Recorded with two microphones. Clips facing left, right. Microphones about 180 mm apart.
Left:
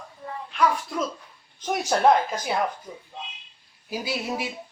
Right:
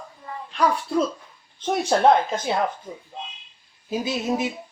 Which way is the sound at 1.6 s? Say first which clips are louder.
Right 2 dB; 25° right (ahead or behind).